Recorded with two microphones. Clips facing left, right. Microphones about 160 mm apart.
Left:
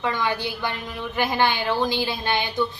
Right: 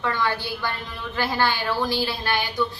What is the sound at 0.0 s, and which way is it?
A woman's voice, 15° left (ahead or behind).